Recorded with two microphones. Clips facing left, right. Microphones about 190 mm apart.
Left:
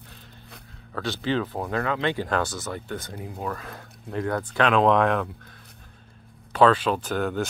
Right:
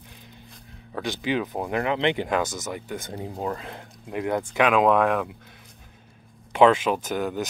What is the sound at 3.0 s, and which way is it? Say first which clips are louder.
Speech: right 3 dB; 25° right (ahead or behind).